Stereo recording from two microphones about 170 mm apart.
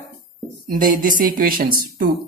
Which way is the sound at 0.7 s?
55° right (ahead or behind).